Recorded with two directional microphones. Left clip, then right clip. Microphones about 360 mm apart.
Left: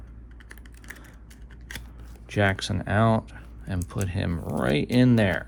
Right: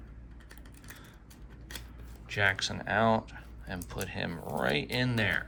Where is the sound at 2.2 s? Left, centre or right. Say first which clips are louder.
Left 3 dB; centre.